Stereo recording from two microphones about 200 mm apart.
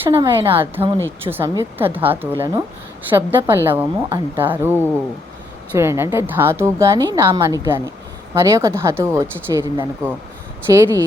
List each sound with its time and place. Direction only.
0.1 s a woman's voice: 15° right (ahead or behind)